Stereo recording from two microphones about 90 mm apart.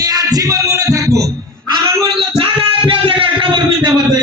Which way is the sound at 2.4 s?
85° right.